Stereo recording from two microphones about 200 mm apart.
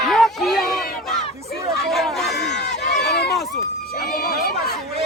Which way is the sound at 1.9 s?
Centre (ahead or behind).